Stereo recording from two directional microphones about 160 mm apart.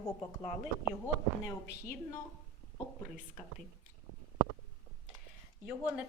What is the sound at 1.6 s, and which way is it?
Speech, 90° left.